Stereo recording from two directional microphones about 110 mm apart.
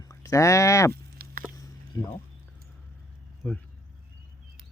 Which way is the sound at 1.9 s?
40° left (ahead or behind).